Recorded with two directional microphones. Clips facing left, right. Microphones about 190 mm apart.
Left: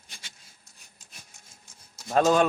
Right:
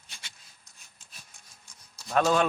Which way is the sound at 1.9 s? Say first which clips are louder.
Left 3 dB; 25° left (ahead or behind).